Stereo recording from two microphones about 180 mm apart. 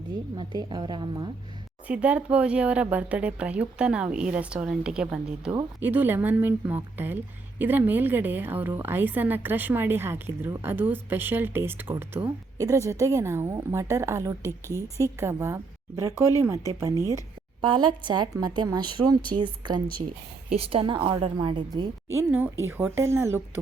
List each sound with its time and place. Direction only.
0.3 s a woman's voice: 25° right (ahead or behind)
1.9 s a woman's voice: 5° right (ahead or behind)
14.4 s a woman's voice: 15° left (ahead or behind)
15.0 s a woman's voice: 15° right (ahead or behind)